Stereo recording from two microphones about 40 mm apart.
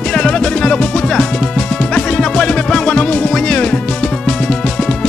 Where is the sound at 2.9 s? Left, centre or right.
Left.